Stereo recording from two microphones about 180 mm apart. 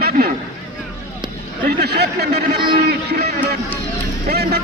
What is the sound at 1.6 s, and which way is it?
Speech, 60° right (ahead or behind).